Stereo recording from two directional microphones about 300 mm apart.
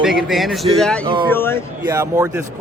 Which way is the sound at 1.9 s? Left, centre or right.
Centre.